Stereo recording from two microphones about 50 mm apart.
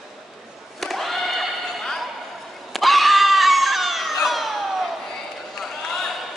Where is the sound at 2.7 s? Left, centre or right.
Centre.